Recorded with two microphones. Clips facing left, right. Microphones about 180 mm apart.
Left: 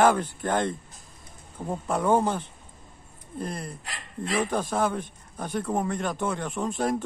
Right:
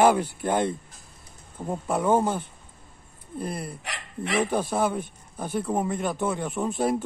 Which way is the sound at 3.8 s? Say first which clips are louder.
Right 1 dB; 70° right (ahead or behind).